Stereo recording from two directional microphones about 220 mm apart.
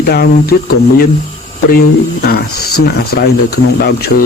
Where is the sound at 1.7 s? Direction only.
45° left (ahead or behind).